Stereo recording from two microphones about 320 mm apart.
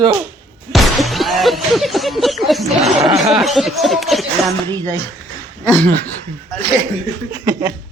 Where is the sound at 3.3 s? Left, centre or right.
Centre.